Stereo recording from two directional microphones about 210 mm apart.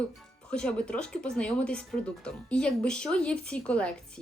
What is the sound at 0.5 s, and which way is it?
A woman's voice, 5° left (ahead or behind).